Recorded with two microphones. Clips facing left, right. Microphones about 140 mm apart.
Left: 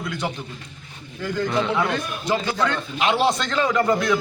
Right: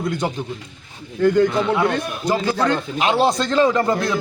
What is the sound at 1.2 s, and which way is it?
Speech, 60° right (ahead or behind).